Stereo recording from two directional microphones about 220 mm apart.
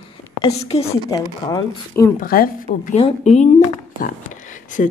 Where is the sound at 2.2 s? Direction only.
40° left (ahead or behind).